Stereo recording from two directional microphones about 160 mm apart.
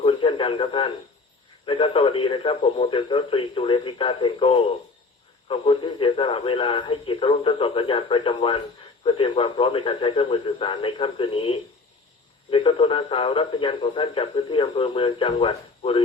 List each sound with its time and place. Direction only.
0.0 s radio: 35° left (ahead or behind)
1.6 s a man's voice: 35° left (ahead or behind)